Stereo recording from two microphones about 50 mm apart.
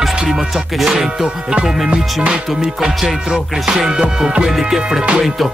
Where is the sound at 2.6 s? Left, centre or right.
Centre.